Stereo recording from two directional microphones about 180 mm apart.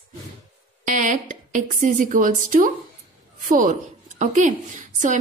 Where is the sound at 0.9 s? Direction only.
45° right (ahead or behind).